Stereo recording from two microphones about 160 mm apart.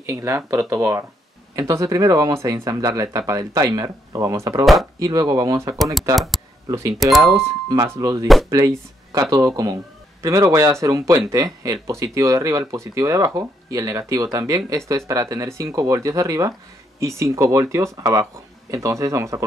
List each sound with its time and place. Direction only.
0.0 s speech: 20° right (ahead or behind)
6.1 s speech: centre (ahead or behind)
7.2 s speech: 20° right (ahead or behind)